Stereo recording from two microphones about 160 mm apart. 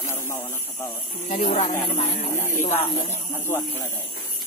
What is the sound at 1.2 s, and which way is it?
Speech, 55° left (ahead or behind).